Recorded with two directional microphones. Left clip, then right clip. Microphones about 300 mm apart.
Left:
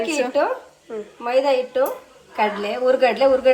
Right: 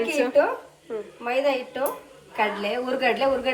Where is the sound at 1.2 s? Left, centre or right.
Left.